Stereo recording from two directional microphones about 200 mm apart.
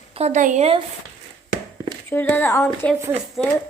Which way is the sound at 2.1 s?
10° left (ahead or behind).